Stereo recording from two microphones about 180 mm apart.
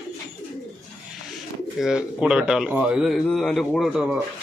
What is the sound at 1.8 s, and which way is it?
Speech, 5° right (ahead or behind).